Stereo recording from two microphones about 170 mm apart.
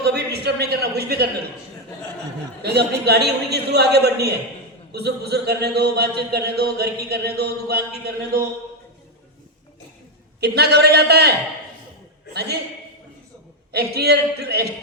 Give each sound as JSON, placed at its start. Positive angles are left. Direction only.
{"t": 0.0, "sound": "a man's voice", "side_deg": -75}
{"t": 2.6, "sound": "speech", "side_deg": -75}
{"t": 10.4, "sound": "speech", "side_deg": -70}
{"t": 12.3, "sound": "speech", "side_deg": -70}
{"t": 13.7, "sound": "speech", "side_deg": -70}